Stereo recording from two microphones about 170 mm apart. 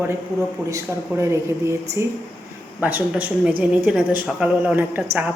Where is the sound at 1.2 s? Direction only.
15° right (ahead or behind).